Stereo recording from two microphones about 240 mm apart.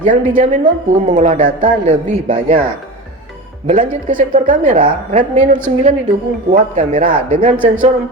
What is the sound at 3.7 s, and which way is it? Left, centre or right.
A woman's voice, right.